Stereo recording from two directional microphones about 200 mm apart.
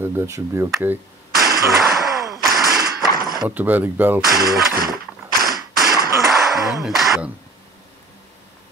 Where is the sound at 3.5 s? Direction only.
10° right (ahead or behind).